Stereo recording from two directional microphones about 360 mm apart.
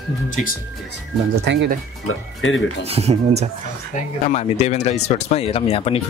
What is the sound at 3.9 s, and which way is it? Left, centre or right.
Speech, left.